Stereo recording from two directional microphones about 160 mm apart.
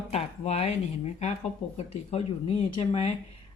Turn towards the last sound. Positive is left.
turn(degrees=40)  # may be behind; listen again after turning